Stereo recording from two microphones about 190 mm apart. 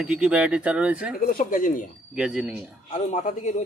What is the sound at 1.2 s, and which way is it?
Speech, 50° left (ahead or behind).